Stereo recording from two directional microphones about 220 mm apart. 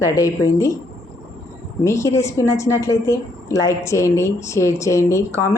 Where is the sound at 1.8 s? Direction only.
15° left (ahead or behind).